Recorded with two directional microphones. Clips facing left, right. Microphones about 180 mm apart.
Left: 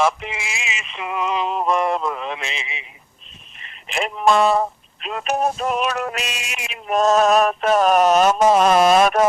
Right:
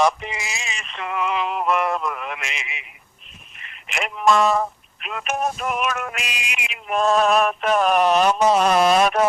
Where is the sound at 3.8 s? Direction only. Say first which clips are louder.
Left 2 dB; 30° left (ahead or behind).